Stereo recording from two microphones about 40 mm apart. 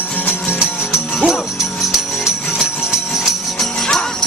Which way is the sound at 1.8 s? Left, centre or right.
Centre.